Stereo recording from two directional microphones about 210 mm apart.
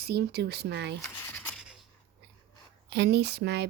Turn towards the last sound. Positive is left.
turn(degrees=-50)  # may be behind; listen again after turning